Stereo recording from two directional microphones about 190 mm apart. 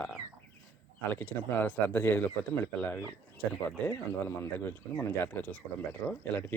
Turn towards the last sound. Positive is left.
turn(degrees=10)  # may be behind; listen again after turning